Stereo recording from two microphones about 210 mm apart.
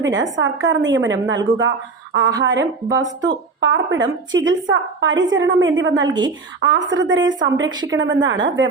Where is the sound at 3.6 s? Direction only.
60° right (ahead or behind).